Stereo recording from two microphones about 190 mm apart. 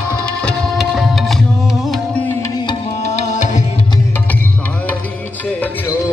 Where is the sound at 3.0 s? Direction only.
40° left (ahead or behind).